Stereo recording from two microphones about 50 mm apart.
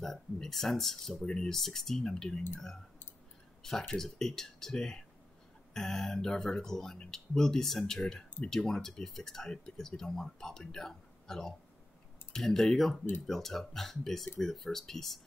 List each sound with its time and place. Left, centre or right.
0.0 s speech: centre
1.2 s speech: centre
1.6 s speech: centre
3.6 s speech: centre